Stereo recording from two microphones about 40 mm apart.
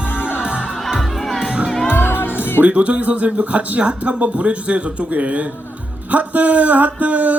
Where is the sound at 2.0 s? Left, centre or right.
Left.